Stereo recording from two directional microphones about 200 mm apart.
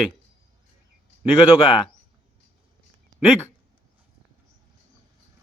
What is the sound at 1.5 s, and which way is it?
Speech, 25° left (ahead or behind).